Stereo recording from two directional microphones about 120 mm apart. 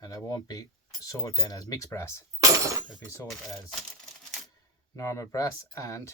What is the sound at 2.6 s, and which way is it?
Speech, 25° right (ahead or behind).